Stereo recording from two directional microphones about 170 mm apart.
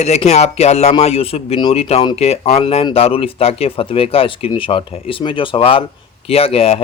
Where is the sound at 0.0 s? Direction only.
40° left (ahead or behind).